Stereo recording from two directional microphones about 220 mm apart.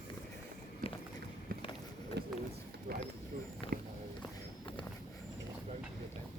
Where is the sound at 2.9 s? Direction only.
45° right (ahead or behind).